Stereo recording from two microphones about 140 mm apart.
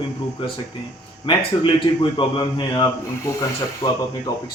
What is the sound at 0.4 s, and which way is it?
Speech, 40° left (ahead or behind).